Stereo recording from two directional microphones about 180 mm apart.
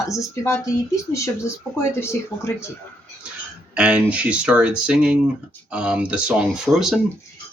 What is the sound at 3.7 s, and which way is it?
Speech, 5° right (ahead or behind).